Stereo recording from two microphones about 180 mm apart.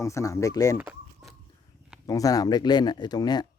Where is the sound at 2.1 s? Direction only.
20° left (ahead or behind).